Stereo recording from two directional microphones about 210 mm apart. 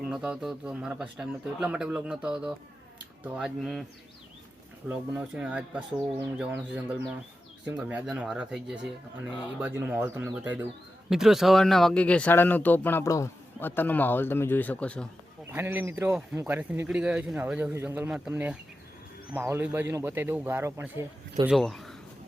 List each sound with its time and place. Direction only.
0.0 s speech: 5° right (ahead or behind)
4.9 s speech: 5° right (ahead or behind)
15.4 s speech: 10° right (ahead or behind)
21.5 s speech: centre (ahead or behind)